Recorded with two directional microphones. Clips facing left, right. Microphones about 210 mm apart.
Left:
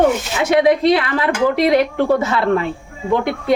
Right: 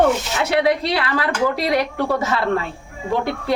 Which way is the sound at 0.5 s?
20° left (ahead or behind).